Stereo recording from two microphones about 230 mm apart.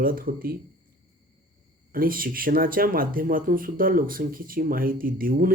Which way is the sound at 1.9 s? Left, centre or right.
Right.